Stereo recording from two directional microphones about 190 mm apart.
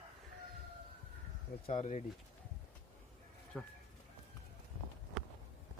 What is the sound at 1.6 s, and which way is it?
Speech, 35° left (ahead or behind).